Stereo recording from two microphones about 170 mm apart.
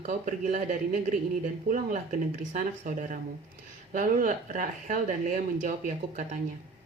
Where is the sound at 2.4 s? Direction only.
50° right (ahead or behind).